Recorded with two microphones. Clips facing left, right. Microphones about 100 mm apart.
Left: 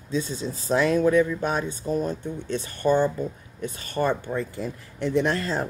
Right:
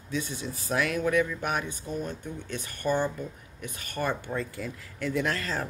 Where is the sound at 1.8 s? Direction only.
35° left (ahead or behind).